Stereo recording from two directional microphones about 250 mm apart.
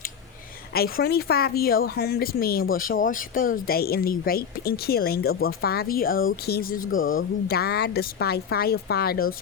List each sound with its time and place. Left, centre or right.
0.7 s speech: left
6.9 s speech: left
7.4 s speech: left